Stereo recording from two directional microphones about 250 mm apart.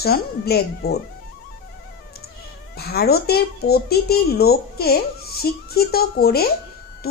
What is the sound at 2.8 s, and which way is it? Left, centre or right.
Speech, left.